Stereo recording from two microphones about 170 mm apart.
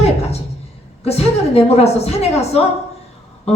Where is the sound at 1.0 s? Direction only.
35° left (ahead or behind).